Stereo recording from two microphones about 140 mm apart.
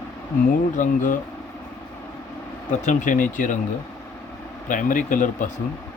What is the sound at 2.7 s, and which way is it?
Speech, 65° left (ahead or behind).